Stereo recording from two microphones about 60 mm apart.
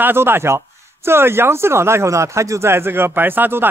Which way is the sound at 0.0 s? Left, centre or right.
Right.